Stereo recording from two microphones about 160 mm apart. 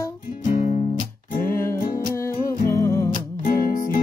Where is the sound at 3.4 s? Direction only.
60° left (ahead or behind).